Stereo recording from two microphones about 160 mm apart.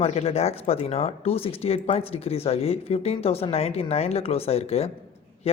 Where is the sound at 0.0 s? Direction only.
40° left (ahead or behind).